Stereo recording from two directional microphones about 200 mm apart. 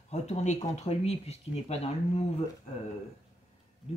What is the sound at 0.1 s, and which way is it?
A woman's voice, 35° left (ahead or behind).